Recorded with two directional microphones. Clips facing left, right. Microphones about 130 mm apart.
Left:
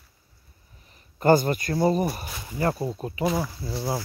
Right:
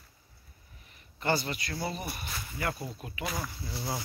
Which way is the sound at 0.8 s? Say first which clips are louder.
Left 11 dB; 40° left (ahead or behind).